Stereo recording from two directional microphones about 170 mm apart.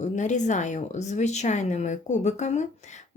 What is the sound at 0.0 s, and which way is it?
Speech, 45° left (ahead or behind).